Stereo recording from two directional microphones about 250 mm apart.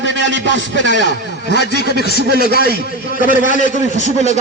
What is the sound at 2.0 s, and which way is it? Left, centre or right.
Speech, left.